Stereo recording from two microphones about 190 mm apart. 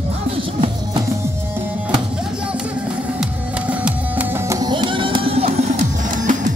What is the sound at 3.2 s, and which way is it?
Music, 5° right (ahead or behind).